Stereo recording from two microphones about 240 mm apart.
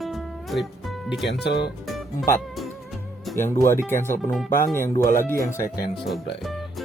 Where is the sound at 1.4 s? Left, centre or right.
Left.